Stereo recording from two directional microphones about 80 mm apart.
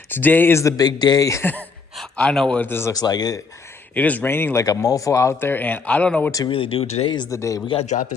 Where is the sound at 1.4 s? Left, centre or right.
Centre.